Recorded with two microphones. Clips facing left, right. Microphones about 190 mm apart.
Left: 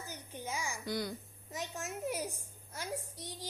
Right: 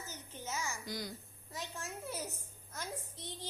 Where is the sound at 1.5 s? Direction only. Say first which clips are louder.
Left 4 dB; 20° left (ahead or behind).